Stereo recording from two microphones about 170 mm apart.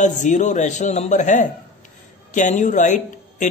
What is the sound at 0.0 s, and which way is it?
Speech, 45° left (ahead or behind).